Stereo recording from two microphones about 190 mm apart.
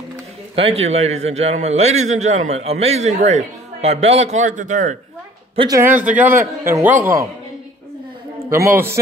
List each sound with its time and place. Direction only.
0.8 s a man's voice: 35° right (ahead or behind)
5.6 s a man's voice: 15° right (ahead or behind)
8.5 s a man's voice: 10° right (ahead or behind)